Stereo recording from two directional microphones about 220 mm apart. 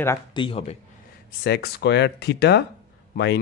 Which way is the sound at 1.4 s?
45° left (ahead or behind).